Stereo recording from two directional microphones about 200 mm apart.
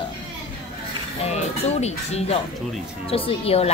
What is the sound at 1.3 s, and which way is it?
A woman's voice, 35° left (ahead or behind).